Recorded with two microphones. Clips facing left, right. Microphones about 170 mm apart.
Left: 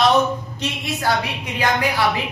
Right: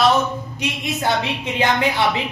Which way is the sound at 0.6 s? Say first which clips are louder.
Right 1 dB; 20° right (ahead or behind).